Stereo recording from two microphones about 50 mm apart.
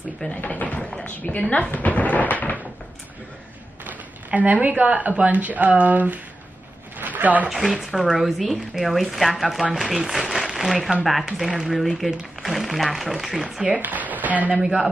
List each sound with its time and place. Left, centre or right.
0.3 s a woman's voice: left
1.7 s a sound: left
3.8 s speech: right
7.0 s a sound: right
7.4 s speech: centre
13.7 s speech: right
14.6 s speech: centre